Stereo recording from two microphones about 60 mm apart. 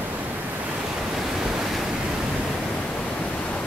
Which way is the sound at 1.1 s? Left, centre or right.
Centre.